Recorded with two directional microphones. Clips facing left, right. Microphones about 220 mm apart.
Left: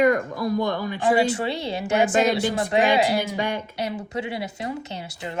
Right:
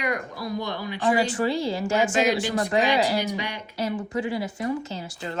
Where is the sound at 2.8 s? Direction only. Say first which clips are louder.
Left 2 dB; 50° left (ahead or behind).